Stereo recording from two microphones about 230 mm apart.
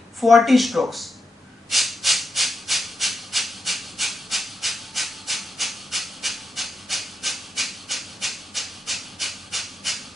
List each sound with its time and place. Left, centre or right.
0.2 s speech: centre
1.7 s maraca: centre